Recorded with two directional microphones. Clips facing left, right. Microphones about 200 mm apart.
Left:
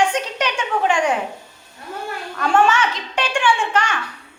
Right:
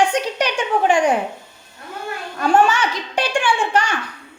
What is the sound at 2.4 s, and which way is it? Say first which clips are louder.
A woman's voice: right 1 dB; 35° right (ahead or behind).